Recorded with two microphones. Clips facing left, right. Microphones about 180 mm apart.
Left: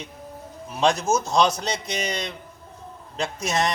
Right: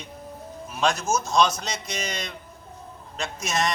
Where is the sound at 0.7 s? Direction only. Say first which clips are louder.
Left 3 dB; 30° left (ahead or behind).